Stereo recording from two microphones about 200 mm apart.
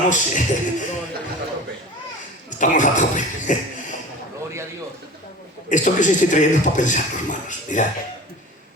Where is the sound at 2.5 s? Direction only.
40° left (ahead or behind).